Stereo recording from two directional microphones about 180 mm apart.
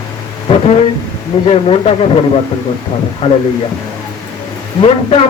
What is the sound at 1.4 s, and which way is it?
Speech, 35° left (ahead or behind).